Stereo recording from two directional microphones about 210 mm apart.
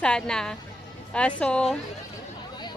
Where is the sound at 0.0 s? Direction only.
5° left (ahead or behind).